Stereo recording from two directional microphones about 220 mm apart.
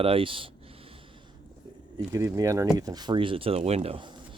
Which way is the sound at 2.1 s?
15° right (ahead or behind).